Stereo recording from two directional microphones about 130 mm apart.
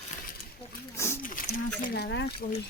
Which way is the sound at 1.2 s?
90° left.